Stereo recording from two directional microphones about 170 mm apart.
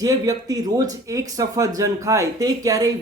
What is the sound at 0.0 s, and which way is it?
Speech, 20° right (ahead or behind).